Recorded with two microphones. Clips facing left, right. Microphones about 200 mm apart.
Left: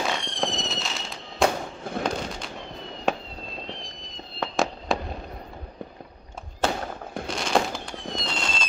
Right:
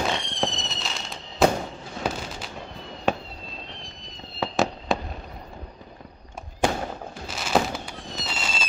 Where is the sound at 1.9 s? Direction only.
55° left (ahead or behind).